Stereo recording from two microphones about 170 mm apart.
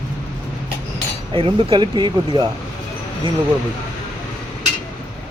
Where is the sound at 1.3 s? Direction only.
30° right (ahead or behind).